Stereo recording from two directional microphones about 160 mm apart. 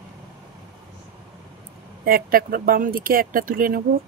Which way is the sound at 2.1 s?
65° right (ahead or behind).